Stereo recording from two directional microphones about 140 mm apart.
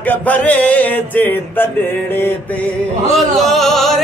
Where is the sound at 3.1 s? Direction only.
Centre (ahead or behind).